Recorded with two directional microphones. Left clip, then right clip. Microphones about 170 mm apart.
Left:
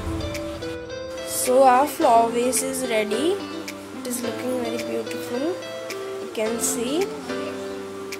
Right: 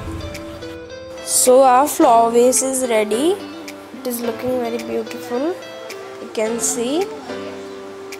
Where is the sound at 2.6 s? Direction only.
25° right (ahead or behind).